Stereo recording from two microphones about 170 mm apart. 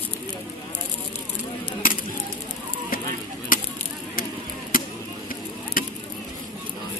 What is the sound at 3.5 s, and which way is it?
Honk, 55° left (ahead or behind).